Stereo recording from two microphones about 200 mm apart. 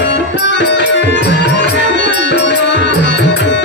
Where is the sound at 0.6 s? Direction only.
60° left (ahead or behind).